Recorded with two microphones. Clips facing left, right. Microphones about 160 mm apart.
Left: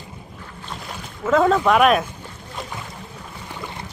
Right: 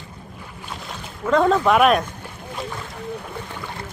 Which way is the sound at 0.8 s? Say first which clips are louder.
Left 1 dB; centre (ahead or behind).